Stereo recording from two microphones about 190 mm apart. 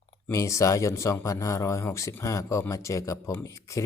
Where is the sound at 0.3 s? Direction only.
15° left (ahead or behind).